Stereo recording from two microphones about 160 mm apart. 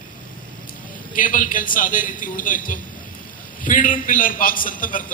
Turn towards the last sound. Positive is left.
turn(degrees=60)  # may be behind; listen again after turning